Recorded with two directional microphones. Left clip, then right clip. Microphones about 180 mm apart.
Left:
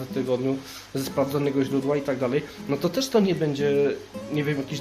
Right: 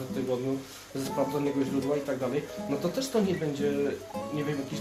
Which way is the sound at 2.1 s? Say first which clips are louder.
Left 5 dB; 50° left (ahead or behind).